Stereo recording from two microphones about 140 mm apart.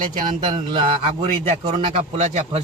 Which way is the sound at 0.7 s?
40° right (ahead or behind).